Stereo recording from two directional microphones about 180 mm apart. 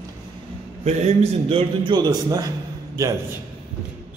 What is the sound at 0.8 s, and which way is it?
A man's voice, 35° right (ahead or behind).